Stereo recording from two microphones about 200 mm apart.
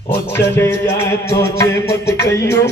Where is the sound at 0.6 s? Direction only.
15° left (ahead or behind).